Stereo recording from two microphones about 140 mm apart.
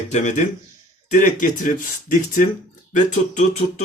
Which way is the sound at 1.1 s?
65° left (ahead or behind).